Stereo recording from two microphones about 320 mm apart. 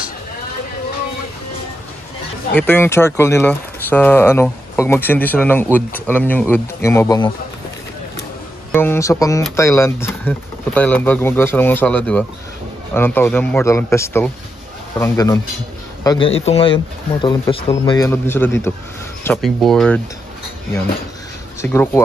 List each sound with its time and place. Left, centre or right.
2.5 s speech: centre
8.7 s a man's voice: centre
21.5 s speech: centre